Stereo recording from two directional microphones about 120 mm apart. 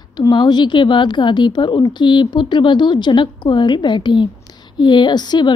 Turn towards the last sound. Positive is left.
turn(degrees=35)  # may be behind; listen again after turning